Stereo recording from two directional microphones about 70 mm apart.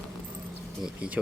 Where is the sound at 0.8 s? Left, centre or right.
Centre.